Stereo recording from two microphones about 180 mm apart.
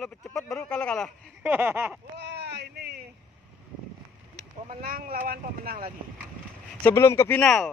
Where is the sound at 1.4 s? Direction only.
10° right (ahead or behind).